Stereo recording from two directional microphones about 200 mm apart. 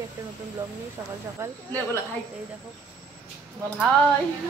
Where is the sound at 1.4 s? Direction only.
15° right (ahead or behind).